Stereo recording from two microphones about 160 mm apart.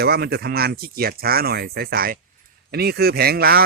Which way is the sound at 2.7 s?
80° right.